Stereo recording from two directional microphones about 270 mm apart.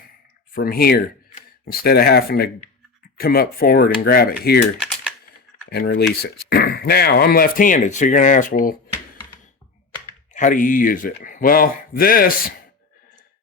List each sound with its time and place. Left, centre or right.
0.5 s speech: left
5.6 s speech: left
10.3 s speech: left